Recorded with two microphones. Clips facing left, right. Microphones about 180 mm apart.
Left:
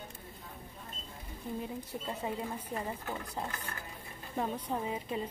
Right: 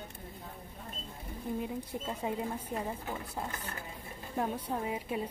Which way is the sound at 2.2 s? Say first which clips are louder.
Right 3 dB; 10° right (ahead or behind).